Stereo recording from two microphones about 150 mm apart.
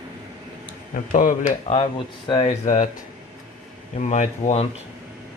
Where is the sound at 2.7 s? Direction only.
60° left (ahead or behind).